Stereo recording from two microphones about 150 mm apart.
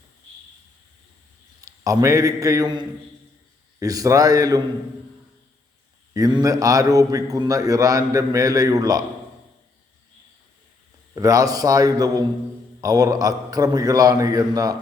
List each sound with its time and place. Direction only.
1.6 s a man's voice: 20° right (ahead or behind)
6.1 s a man's voice: 25° right (ahead or behind)
11.1 s a man's voice: 25° right (ahead or behind)